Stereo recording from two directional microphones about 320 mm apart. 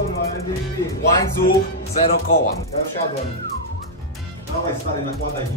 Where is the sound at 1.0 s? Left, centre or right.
Left.